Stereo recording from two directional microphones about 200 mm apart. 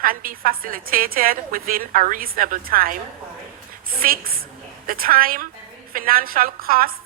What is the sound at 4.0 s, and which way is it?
A woman's voice, 45° right (ahead or behind).